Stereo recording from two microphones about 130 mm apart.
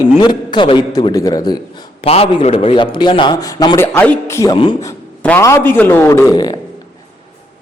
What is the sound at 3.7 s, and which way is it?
Speech, 15° left (ahead or behind).